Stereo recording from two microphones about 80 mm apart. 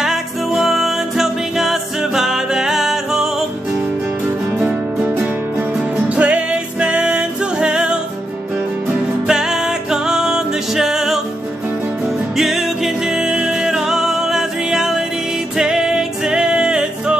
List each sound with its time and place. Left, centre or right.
0.0 s music: centre
4.6 s music: right; by 11.1 s centre
12.4 s music: centre